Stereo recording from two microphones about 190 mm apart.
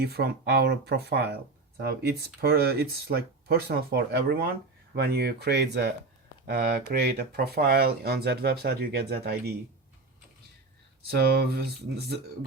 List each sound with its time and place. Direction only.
0.0 s speech: 55° right (ahead or behind)
11.1 s speech: 55° right (ahead or behind)